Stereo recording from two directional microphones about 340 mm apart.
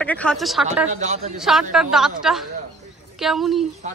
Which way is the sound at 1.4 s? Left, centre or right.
Centre.